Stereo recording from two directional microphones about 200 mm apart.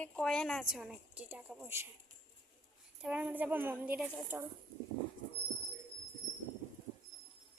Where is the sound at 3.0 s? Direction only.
5° right (ahead or behind).